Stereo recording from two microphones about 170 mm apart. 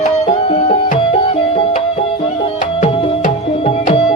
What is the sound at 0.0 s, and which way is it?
Music, 35° left (ahead or behind).